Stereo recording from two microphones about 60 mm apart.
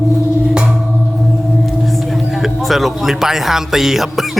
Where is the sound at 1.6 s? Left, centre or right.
Centre.